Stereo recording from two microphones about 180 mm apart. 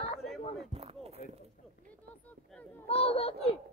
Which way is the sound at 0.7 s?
35° right (ahead or behind).